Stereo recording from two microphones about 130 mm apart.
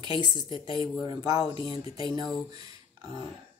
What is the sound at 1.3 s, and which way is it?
Speech, 45° left (ahead or behind).